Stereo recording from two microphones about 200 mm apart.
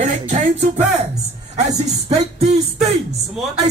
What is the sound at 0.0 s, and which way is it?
Music, 40° right (ahead or behind).